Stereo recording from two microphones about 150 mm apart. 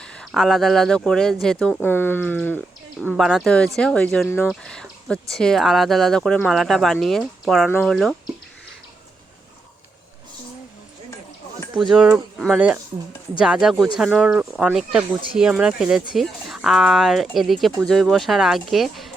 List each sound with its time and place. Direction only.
0.0 s speech: 5° left (ahead or behind)
3.1 s speech: 5° right (ahead or behind)
4.3 s speech: 15° left (ahead or behind)
4.6 s a sound: 5° left (ahead or behind)
5.3 s speech: 5° left (ahead or behind)
11.9 s speech: 5° right (ahead or behind)